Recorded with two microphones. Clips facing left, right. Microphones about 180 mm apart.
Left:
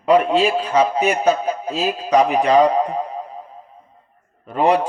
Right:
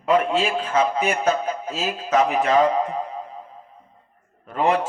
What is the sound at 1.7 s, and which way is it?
Speech, 35° left (ahead or behind).